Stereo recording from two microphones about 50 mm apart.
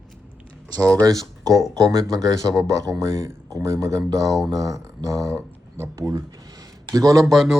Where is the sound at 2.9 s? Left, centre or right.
Right.